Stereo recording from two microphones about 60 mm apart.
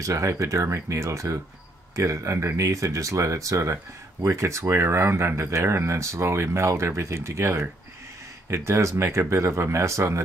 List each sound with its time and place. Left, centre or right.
0.0 s speech: right